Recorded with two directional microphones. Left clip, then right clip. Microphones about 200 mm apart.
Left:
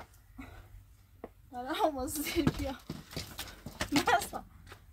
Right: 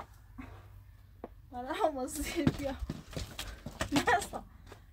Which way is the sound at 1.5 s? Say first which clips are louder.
Left 1 dB; 5° right (ahead or behind).